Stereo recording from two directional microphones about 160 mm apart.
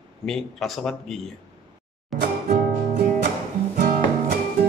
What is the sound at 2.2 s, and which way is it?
Music, 70° right (ahead or behind).